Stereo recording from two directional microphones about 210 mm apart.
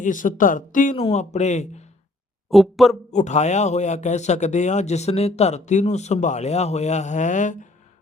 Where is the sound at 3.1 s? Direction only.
35° left (ahead or behind).